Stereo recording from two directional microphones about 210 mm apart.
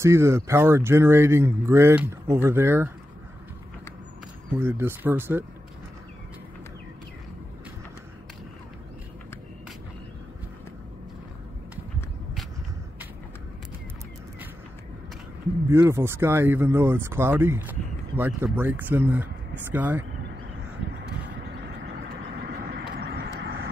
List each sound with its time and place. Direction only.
0.0 s speech: 15° right (ahead or behind)
4.5 s speech: 10° right (ahead or behind)
15.7 s speech: 15° right (ahead or behind)
22.4 s vehicle: 50° right (ahead or behind)